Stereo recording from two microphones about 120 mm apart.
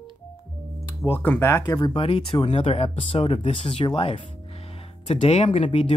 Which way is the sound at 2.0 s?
50° left (ahead or behind).